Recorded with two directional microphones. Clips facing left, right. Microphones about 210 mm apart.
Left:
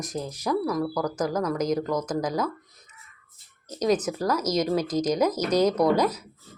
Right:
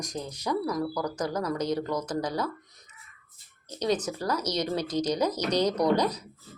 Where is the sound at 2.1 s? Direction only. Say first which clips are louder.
Left 3 dB; 90° left.